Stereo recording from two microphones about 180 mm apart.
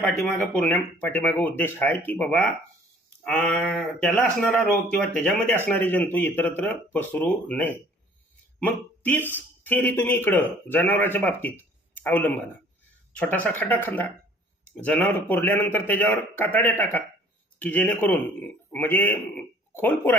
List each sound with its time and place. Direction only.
0.0 s speech: 10° left (ahead or behind)